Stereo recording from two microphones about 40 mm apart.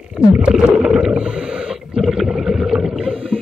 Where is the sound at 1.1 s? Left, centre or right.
Right.